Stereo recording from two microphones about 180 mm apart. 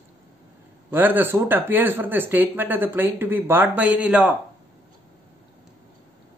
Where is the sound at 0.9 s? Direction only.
10° right (ahead or behind).